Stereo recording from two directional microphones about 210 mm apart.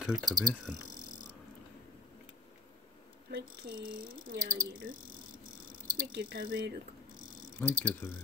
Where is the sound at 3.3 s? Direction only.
45° right (ahead or behind).